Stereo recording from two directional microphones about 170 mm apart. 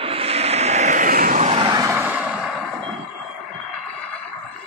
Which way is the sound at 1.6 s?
25° right (ahead or behind).